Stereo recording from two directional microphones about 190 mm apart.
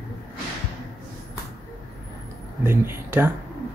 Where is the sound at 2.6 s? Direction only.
10° right (ahead or behind).